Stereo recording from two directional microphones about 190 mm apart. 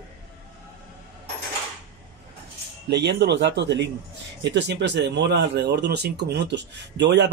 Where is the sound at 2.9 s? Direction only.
60° right (ahead or behind).